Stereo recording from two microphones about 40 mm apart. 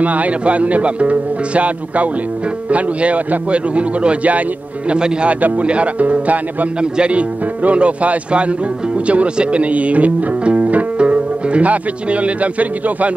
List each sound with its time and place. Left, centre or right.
0.0 s a man's voice: right
4.9 s speech: right
5.3 s a man's voice: right
6.8 s speech: right